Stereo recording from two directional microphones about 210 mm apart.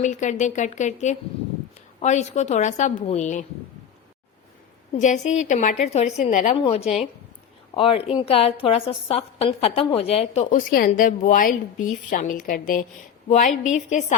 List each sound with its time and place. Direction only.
0.0 s a woman's voice: 35° left (ahead or behind)
4.9 s a woman's voice: 35° left (ahead or behind)